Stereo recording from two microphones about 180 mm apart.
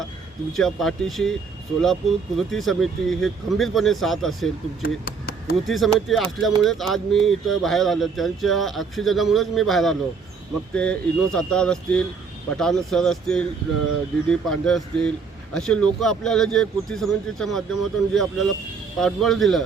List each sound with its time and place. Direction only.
0.5 s speech: centre (ahead or behind)
4.8 s chop: 55° left (ahead or behind)
5.6 s speech: centre (ahead or behind)